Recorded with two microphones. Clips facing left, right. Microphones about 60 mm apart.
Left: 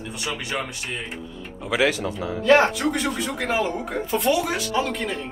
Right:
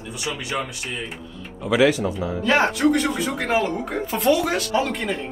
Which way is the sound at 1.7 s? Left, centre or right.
Left.